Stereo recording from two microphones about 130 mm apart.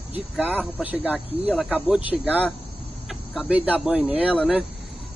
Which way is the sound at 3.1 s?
5° right (ahead or behind).